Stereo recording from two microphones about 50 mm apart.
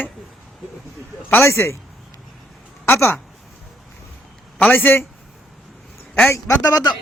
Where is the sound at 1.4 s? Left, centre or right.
Left.